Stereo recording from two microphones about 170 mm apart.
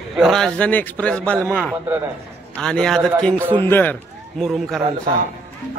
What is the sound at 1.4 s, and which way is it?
Speech, 10° right (ahead or behind).